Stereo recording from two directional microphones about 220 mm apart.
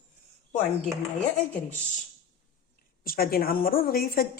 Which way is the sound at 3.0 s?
40° left (ahead or behind).